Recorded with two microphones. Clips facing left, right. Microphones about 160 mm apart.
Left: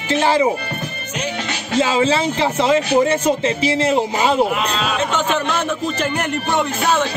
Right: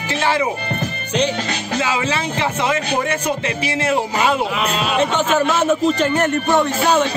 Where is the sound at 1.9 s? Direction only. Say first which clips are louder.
Left 4 dB; 30° left (ahead or behind).